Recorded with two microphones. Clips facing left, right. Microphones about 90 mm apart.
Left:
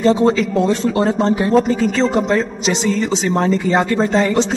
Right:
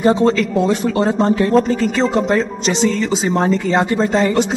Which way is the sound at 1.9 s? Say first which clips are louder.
Even; 5° right (ahead or behind).